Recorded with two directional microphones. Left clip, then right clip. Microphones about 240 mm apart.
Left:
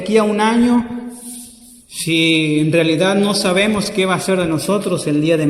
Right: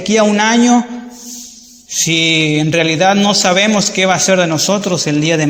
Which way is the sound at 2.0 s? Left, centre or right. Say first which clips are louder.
Right 3 dB; centre.